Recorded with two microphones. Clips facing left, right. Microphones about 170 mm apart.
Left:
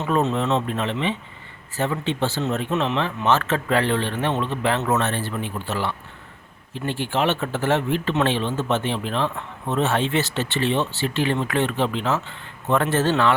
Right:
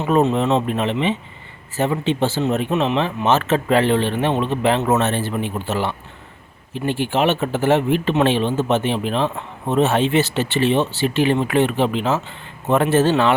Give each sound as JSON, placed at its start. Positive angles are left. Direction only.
{"t": 0.0, "sound": "speech", "side_deg": -15}